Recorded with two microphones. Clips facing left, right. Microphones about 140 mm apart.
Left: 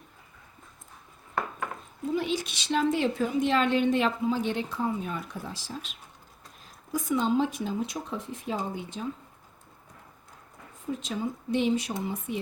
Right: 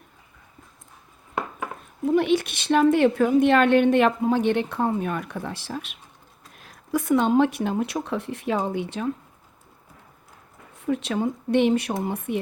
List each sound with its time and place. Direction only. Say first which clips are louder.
2.0 s a woman's voice: right 8 dB; 65° right (ahead or behind)
10.8 s a woman's voice: right 7 dB; 70° right (ahead or behind)